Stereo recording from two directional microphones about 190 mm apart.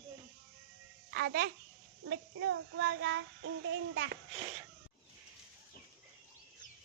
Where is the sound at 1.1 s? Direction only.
60° right (ahead or behind).